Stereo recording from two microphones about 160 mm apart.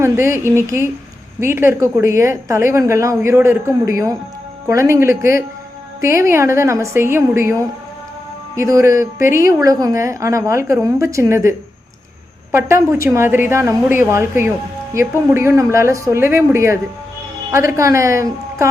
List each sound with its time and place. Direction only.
0.0 s a woman's voice: 15° right (ahead or behind)
8.5 s a woman's voice: 20° right (ahead or behind)